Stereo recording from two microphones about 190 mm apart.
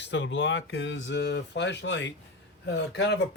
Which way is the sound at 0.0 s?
70° left (ahead or behind).